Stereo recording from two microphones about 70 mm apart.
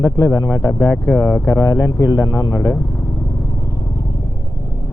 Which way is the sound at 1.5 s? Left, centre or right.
Left.